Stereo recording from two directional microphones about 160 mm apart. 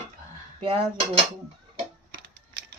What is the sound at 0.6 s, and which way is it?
Cutlery, 35° right (ahead or behind).